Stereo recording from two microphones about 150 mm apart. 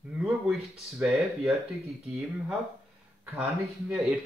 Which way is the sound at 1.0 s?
Centre (ahead or behind).